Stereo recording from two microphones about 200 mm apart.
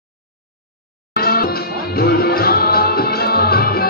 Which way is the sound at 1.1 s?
50° left (ahead or behind).